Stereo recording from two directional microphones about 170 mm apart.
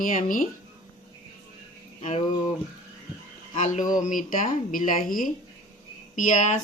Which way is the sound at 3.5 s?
45° left (ahead or behind).